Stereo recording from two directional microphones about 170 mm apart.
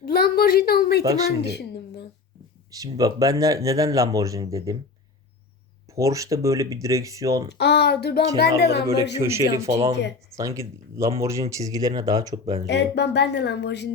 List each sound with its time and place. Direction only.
0.0 s a woman's voice: 60° left (ahead or behind)
1.4 s a sound: 75° left (ahead or behind)
2.7 s speech: 20° right (ahead or behind)
5.9 s speech: 20° right (ahead or behind)
7.6 s speech: 75° left (ahead or behind)
9.2 s speech: 15° right (ahead or behind)
9.6 s speech: 40° right (ahead or behind)
10.3 s speech: 20° right (ahead or behind)
12.6 s speech: 80° left